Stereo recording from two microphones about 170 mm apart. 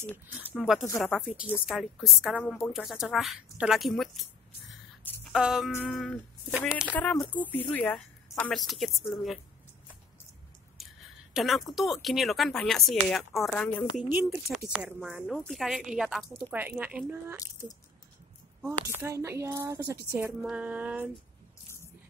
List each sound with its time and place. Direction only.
0.6 s speech: centre (ahead or behind)
5.2 s a sound: 5° right (ahead or behind)
5.8 s a woman's voice: centre (ahead or behind)
11.3 s speech: centre (ahead or behind)
14.1 s speech: 5° right (ahead or behind)
18.7 s a woman's voice: 15° right (ahead or behind)